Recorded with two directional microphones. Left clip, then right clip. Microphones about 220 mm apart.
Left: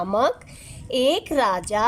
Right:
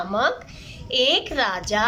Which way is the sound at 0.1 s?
30° left (ahead or behind).